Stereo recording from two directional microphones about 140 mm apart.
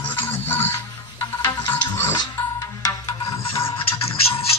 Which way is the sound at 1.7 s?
15° left (ahead or behind).